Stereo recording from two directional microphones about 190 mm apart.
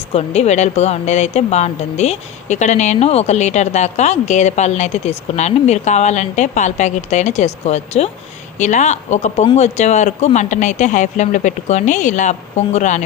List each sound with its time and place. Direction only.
0.1 s speech: 35° left (ahead or behind)